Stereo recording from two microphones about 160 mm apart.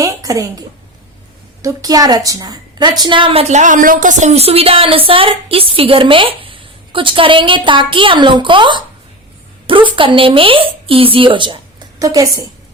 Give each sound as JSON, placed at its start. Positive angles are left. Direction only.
{"t": 0.0, "sound": "a sound", "side_deg": -20}
{"t": 1.6, "sound": "a woman's voice", "side_deg": -20}
{"t": 3.5, "sound": "speech", "side_deg": -50}